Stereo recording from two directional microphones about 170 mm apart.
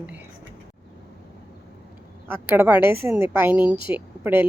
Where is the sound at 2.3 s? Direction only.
15° right (ahead or behind).